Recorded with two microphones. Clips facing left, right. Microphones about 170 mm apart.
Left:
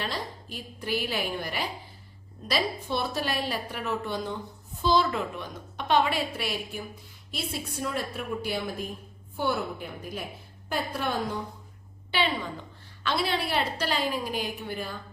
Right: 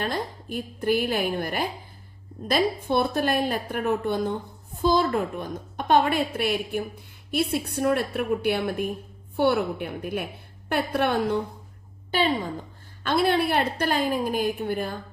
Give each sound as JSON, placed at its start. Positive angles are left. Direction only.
{"t": 0.0, "sound": "a woman's voice", "side_deg": -50}
{"t": 12.1, "sound": "a woman's voice", "side_deg": -45}